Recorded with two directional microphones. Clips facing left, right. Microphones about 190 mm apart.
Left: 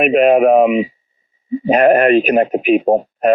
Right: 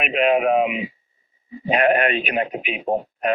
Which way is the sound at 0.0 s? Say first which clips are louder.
Left 8 dB; 45° left (ahead or behind).